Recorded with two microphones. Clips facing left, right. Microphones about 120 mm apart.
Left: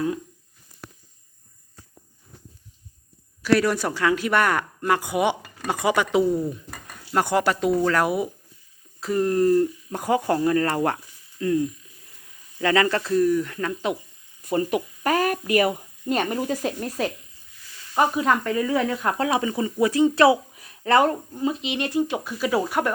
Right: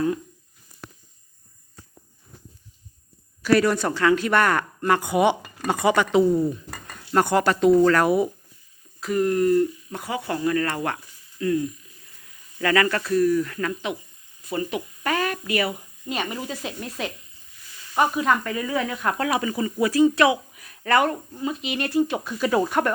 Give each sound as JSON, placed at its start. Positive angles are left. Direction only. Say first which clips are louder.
{"t": 3.4, "sound": "speech", "louder": "right 1 dB", "side_deg": 0}
{"t": 9.0, "sound": "speech", "louder": "even", "side_deg": 30}
{"t": 10.0, "sound": "speech", "louder": "left 7 dB", "side_deg": 45}
{"t": 10.4, "sound": "speech", "louder": "left 3 dB", "side_deg": 30}
{"t": 14.4, "sound": "speech", "louder": "left 4 dB", "side_deg": 45}
{"t": 17.9, "sound": "speech", "louder": "even", "side_deg": 25}
{"t": 18.4, "sound": "speech", "louder": "left 4 dB", "side_deg": 0}
{"t": 18.9, "sound": "speech", "louder": "left 1 dB", "side_deg": 25}